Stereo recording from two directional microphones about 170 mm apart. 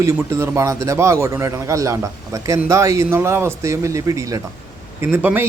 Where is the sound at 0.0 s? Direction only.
15° right (ahead or behind).